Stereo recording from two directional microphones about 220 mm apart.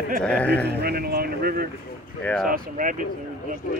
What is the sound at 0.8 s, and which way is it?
Speech, 45° right (ahead or behind).